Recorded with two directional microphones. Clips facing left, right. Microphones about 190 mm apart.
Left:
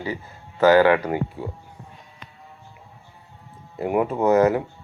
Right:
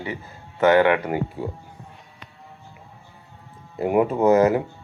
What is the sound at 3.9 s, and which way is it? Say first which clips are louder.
Speech: right 2 dB; 10° right (ahead or behind).